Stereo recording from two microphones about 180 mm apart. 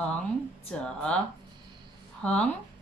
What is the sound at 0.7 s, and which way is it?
Speech, 5° left (ahead or behind).